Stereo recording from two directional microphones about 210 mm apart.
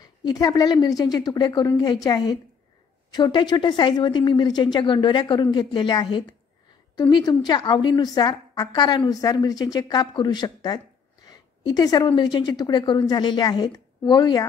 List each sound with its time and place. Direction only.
0.0 s a woman's voice: 20° left (ahead or behind)